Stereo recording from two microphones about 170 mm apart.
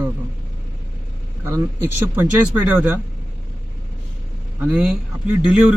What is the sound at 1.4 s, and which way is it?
Speech, 15° right (ahead or behind).